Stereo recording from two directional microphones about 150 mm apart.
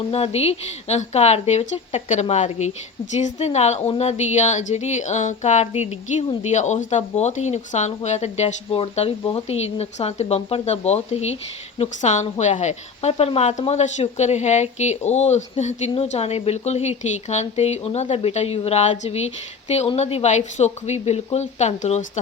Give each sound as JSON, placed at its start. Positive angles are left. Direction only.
{"t": 0.1, "sound": "speech", "side_deg": 45}